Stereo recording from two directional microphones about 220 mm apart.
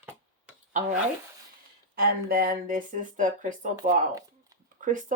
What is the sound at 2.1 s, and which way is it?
Speech, 40° right (ahead or behind).